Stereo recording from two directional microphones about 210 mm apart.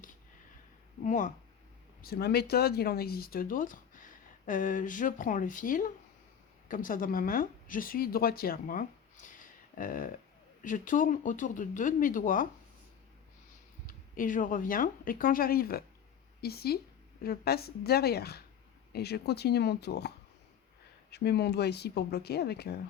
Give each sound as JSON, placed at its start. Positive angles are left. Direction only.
{"t": 1.0, "sound": "speech", "side_deg": 35}
{"t": 2.0, "sound": "speech", "side_deg": 45}
{"t": 13.8, "sound": "speech", "side_deg": 40}